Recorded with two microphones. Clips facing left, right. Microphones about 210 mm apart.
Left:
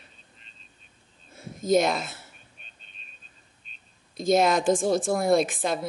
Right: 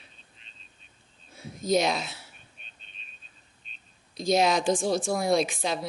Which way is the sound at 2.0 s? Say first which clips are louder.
Left 1 dB; 50° left (ahead or behind).